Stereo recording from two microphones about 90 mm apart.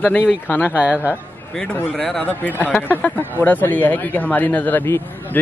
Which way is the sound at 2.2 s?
20° left (ahead or behind).